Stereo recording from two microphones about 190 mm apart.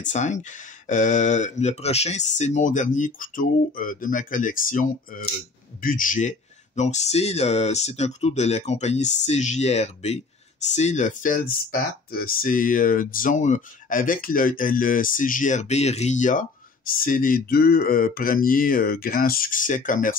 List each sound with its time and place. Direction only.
0.0 s speech: 40° left (ahead or behind)